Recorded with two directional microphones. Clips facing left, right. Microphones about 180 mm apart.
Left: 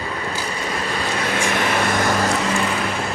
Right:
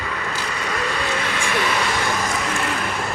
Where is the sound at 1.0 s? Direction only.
45° left (ahead or behind).